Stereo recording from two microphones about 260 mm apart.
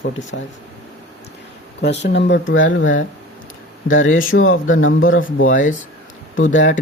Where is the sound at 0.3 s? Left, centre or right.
Left.